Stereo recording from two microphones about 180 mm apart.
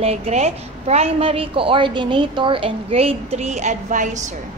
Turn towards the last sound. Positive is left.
turn(degrees=-45)  # may be behind; listen again after turning